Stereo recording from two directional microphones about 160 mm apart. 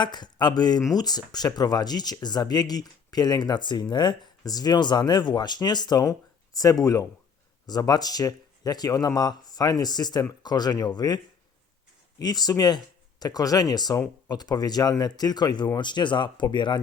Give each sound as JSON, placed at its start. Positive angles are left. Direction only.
{"t": 0.0, "sound": "speech", "side_deg": 25}
{"t": 12.2, "sound": "speech", "side_deg": 25}